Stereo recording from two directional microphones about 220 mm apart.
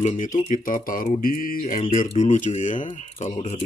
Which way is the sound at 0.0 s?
35° left (ahead or behind).